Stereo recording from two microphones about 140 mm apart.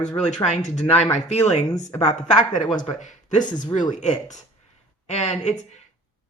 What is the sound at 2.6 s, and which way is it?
Speech, 30° left (ahead or behind).